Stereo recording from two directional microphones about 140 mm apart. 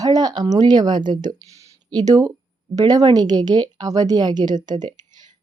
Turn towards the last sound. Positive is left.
turn(degrees=-30)  # may be behind; listen again after turning